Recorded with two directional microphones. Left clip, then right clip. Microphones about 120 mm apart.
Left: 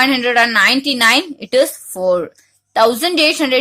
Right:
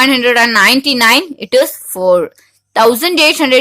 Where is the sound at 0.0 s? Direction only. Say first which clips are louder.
Right 3 dB; 25° right (ahead or behind).